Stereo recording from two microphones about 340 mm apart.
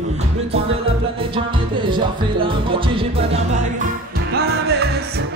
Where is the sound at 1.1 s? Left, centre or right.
Centre.